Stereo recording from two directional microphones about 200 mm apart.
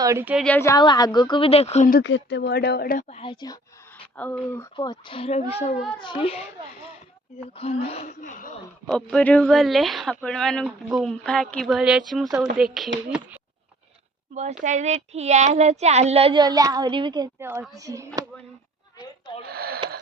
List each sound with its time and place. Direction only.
0.0 s a woman's voice: 15° right (ahead or behind)
0.4 s a child's voice: 10° left (ahead or behind); by 2.0 s 35° left (ahead or behind)
2.0 s speech: 60° left (ahead or behind); by 3.1 s 45° left (ahead or behind)
3.1 s a child's voice: 25° left (ahead or behind)
3.9 s speech: 10° left (ahead or behind)
4.8 s a child's voice: 25° left (ahead or behind)
7.5 s a woman's voice: 30° left (ahead or behind)
8.9 s speech: 5° left (ahead or behind)
14.6 s a woman's voice: 35° right (ahead or behind)
17.4 s speech: 10° right (ahead or behind)
19.5 s speech: 50° right (ahead or behind)